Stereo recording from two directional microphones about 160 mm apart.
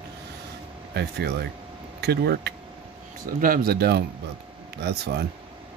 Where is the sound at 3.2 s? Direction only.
65° right (ahead or behind); by 5.2 s 90° right.